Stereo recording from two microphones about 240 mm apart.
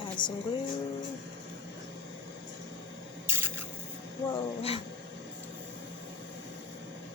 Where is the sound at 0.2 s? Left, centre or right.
Centre.